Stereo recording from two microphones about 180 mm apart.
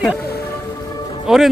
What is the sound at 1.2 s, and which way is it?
Speech, centre (ahead or behind).